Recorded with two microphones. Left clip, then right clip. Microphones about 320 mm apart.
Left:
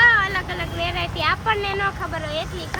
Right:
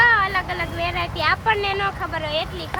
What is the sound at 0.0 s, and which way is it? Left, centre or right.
Vehicle, centre.